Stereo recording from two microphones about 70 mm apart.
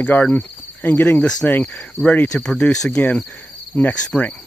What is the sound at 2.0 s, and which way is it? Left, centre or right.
Insect, left.